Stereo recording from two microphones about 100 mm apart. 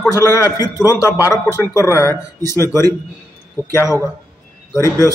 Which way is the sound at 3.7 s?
25° left (ahead or behind).